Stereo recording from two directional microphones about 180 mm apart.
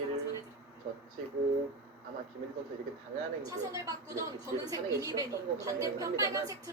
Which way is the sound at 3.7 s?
15° right (ahead or behind).